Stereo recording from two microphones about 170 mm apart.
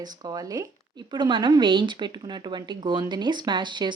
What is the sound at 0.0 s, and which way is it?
A woman's voice, 25° right (ahead or behind).